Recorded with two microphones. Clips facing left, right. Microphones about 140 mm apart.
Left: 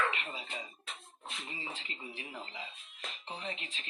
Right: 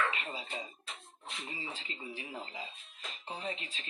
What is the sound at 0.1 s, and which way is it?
Speech, 35° right (ahead or behind).